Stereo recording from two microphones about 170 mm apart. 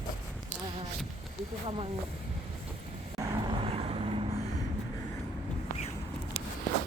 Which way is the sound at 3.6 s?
35° right (ahead or behind).